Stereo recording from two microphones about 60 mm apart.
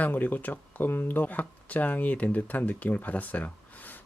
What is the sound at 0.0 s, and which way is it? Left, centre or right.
Speech, left.